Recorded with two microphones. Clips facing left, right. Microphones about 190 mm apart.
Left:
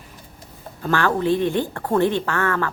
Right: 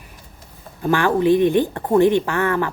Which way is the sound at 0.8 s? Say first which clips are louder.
Right 3 dB; 15° right (ahead or behind).